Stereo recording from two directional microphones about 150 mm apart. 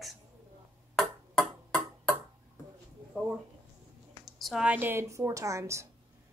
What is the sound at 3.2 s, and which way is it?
A woman's voice, centre (ahead or behind).